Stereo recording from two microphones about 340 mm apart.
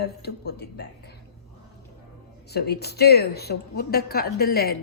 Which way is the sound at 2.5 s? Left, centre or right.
Left.